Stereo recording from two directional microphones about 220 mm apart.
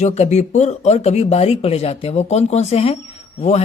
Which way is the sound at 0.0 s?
30° left (ahead or behind).